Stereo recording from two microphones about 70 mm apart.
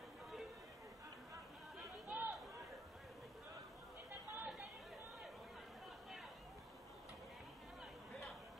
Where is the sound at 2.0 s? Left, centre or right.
Right.